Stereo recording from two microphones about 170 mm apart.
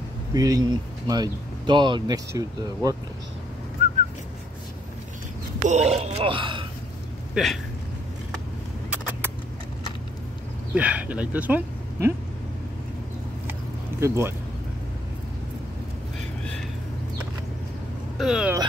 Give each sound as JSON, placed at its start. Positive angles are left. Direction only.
{"t": 0.3, "sound": "speech", "side_deg": -20}
{"t": 3.8, "sound": "whistling", "side_deg": -40}
{"t": 5.7, "sound": "speech", "side_deg": -40}
{"t": 7.4, "sound": "speech", "side_deg": -5}
{"t": 10.7, "sound": "speech", "side_deg": -10}
{"t": 13.5, "sound": "a sound", "side_deg": -15}
{"t": 18.1, "sound": "speech", "side_deg": -5}